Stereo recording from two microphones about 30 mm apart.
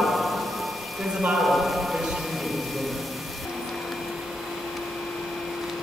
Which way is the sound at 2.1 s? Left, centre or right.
Centre.